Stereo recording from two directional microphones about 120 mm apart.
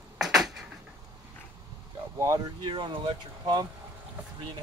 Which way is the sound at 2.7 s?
40° right (ahead or behind).